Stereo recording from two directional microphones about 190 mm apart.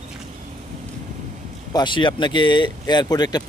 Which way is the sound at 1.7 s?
25° left (ahead or behind).